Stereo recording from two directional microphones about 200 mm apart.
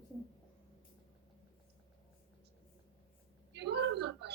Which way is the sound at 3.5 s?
60° right (ahead or behind).